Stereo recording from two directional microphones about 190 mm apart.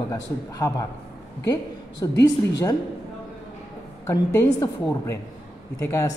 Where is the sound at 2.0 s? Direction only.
20° left (ahead or behind).